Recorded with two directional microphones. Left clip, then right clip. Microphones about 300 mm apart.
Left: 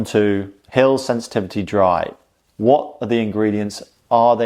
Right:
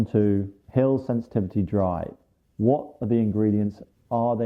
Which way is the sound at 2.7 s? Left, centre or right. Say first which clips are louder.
Left 10 dB; left.